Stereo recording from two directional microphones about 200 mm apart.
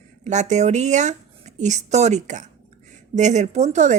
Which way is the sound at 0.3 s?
35° right (ahead or behind).